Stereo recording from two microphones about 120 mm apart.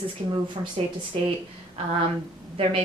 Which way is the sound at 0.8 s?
60° right (ahead or behind).